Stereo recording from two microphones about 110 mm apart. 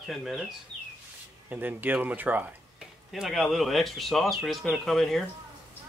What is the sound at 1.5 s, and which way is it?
Speech, 15° right (ahead or behind).